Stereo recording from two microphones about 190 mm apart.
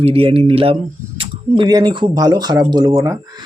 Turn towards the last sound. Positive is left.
turn(degrees=-20)  # may be behind; listen again after turning